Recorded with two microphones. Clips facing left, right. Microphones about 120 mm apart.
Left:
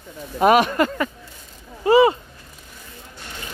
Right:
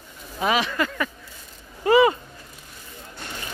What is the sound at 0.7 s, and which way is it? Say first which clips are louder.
Speech: left 5 dB; 35° left (ahead or behind).